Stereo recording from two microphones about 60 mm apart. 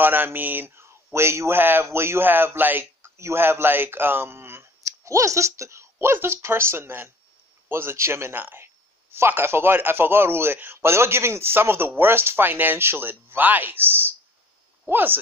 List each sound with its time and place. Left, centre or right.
0.0 s speech: right
1.6 s speech: right
4.8 s speech: right